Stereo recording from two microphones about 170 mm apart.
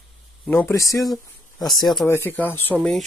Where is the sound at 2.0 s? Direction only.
15° left (ahead or behind).